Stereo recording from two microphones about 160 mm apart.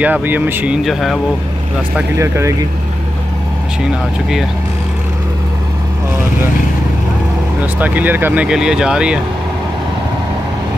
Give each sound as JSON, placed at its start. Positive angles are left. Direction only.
{"t": 0.0, "sound": "speech", "side_deg": -10}
{"t": 0.8, "sound": "speech", "side_deg": 0}
{"t": 2.0, "sound": "speech", "side_deg": -15}
{"t": 7.8, "sound": "speech", "side_deg": -10}